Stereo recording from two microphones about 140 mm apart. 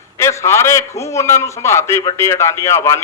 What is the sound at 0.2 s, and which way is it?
Speech, 20° left (ahead or behind).